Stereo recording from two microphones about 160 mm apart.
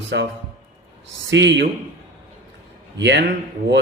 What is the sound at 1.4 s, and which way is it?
Speech, 90° right.